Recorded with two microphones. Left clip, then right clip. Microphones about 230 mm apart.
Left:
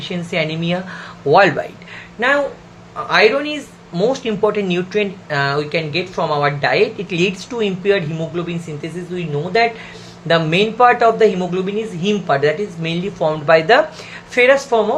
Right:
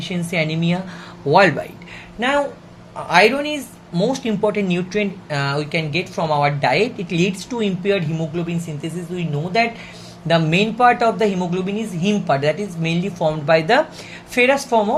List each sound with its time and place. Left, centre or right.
0.0 s speech: right
1.3 s speech: centre
2.1 s speech: right